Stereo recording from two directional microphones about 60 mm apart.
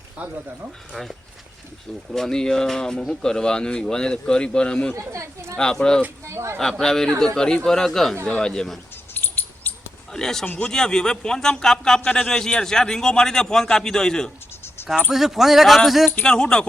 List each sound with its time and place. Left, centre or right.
0.2 s speech: right
0.9 s speech: centre
2.1 s speech: centre
4.9 s speech: right
5.5 s speech: centre
6.2 s speech: right
6.6 s speech: centre
9.1 s a sound: left
10.1 s speech: centre
10.4 s speech: left
10.7 s speech: centre
14.8 s a sound: left
15.1 s a man's voice: centre
16.2 s speech: centre